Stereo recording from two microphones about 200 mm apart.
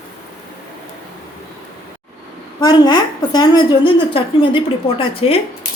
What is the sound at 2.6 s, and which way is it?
A woman's voice, 20° left (ahead or behind).